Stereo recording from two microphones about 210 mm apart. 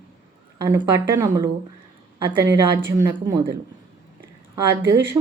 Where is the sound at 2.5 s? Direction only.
10° right (ahead or behind).